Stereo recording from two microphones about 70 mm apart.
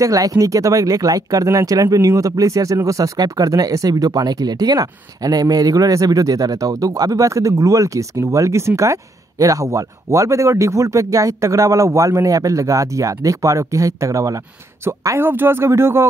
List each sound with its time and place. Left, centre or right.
0.0 s speech: right
14.9 s speech: right